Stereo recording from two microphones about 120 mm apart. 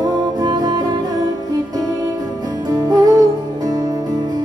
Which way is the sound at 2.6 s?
30° right (ahead or behind).